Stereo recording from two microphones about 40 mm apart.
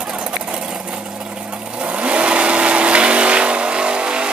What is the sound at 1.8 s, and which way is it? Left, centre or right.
Vehicle, right.